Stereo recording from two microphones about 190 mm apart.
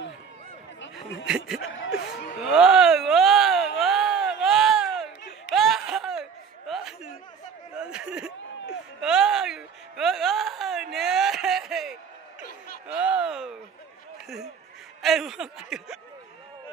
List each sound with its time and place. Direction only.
1.2 s chuckle: 5° right (ahead or behind)
1.6 s chuckle: 90° left
2.4 s a sound: 5° right (ahead or behind)
5.5 s laughter: centre (ahead or behind)
6.7 s a sound: 5° right (ahead or behind)
15.0 s chuckle: centre (ahead or behind)